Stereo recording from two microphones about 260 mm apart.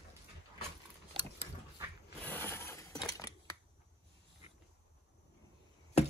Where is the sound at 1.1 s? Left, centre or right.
Centre.